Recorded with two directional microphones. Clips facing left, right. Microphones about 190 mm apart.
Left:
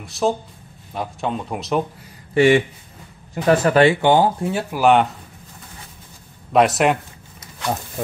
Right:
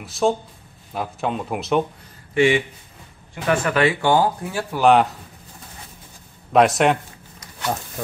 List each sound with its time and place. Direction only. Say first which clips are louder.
0.0 s speech: right 1 dB; centre (ahead or behind)
2.3 s speech: left 3 dB; 40° left (ahead or behind)
4.0 s speech: left 3 dB; 20° left (ahead or behind)
4.7 s speech: even; centre (ahead or behind)
6.5 s speech: even; centre (ahead or behind)